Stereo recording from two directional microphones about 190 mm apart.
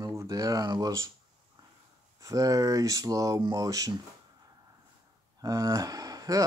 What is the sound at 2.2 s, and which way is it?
Speech, 20° right (ahead or behind).